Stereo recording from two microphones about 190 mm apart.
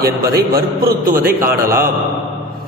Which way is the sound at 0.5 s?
50° right (ahead or behind).